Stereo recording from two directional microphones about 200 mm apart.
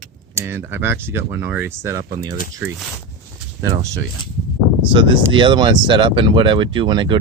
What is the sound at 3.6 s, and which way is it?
Speech, 15° right (ahead or behind).